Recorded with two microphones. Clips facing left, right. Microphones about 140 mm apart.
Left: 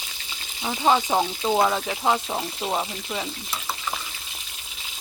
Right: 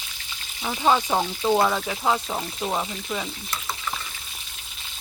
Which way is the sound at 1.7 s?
15° left (ahead or behind).